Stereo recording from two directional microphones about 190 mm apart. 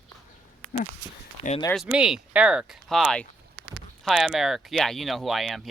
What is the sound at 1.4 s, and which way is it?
Speech, 35° left (ahead or behind).